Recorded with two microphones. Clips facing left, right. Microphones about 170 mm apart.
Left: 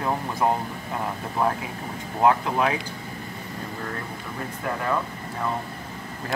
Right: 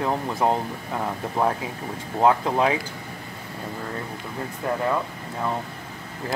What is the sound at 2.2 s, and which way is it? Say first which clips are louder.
Speech: right 1 dB; 25° right (ahead or behind).